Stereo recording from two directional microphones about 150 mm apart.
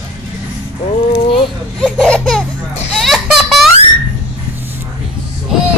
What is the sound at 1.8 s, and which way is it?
Speech, 5° left (ahead or behind).